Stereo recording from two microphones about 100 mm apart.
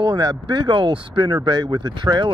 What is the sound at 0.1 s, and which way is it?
Speech, 45° right (ahead or behind).